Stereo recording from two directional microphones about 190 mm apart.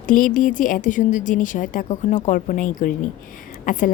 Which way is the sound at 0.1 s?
45° left (ahead or behind).